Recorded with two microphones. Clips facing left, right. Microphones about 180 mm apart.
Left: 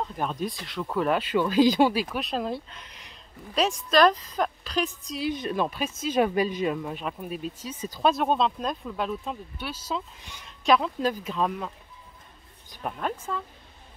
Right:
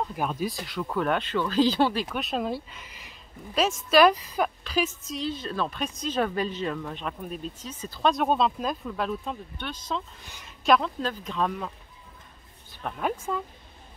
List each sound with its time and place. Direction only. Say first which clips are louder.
0.1 s speech: right 1 dB; 5° right (ahead or behind); by 2.0 s 10° left (ahead or behind)
2.0 s speech: even; centre (ahead or behind)
5.2 s speech: left 3 dB; 15° left (ahead or behind)
5.8 s speech: left 3 dB; 5° left (ahead or behind)
10.4 s a sound: even; centre (ahead or behind)
11.0 s speech: left 2 dB; 10° left (ahead or behind)
12.8 s speech: left 1 dB; 10° left (ahead or behind)
13.3 s speech: right 2 dB; 15° right (ahead or behind)